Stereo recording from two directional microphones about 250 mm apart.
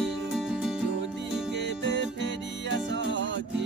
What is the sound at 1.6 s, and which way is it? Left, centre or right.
Music, right.